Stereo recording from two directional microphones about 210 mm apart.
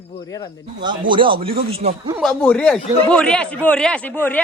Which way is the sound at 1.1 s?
25° right (ahead or behind).